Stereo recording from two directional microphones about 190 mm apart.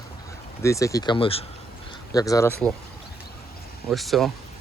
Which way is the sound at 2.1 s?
20° left (ahead or behind).